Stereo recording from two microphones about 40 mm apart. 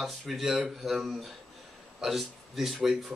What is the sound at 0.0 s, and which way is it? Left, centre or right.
Speech, centre.